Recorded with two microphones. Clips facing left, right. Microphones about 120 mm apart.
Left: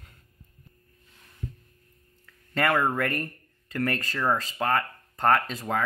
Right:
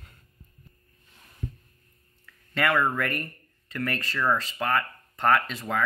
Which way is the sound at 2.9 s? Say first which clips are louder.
Left 2 dB; 40° left (ahead or behind).